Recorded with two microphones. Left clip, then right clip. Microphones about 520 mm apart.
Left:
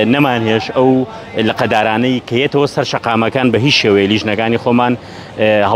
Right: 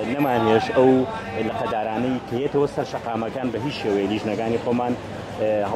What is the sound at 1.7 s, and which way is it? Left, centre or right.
Speech, left.